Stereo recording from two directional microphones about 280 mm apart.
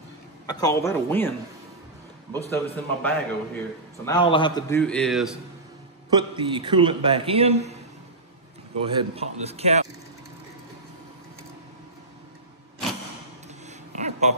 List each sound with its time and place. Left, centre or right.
0.5 s a man's voice: centre
2.5 s a man's voice: centre
6.0 s a man's voice: centre
8.8 s a man's voice: centre
13.7 s a sound: right